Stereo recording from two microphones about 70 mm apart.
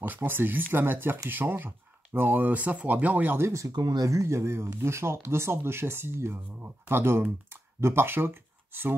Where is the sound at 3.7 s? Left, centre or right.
Right.